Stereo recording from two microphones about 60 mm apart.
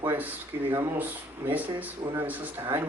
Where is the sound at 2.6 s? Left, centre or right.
Right.